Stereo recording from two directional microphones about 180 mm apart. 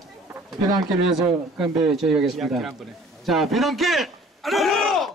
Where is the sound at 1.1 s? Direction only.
5° right (ahead or behind).